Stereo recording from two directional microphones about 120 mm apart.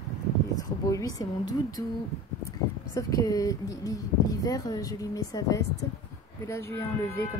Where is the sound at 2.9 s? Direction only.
30° left (ahead or behind).